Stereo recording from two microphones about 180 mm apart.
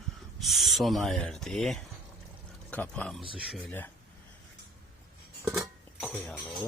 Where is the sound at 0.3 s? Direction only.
Centre (ahead or behind).